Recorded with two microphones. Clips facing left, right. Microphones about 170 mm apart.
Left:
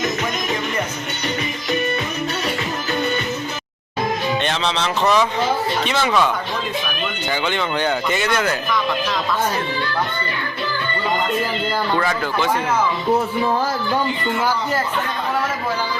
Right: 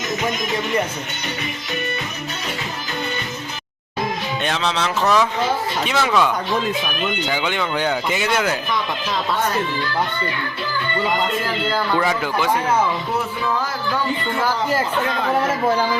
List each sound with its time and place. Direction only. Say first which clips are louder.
4.4 s speech: even; 5° right (ahead or behind)
11.9 s speech: even; 15° right (ahead or behind)
13.4 s music: left 3 dB; 35° left (ahead or behind)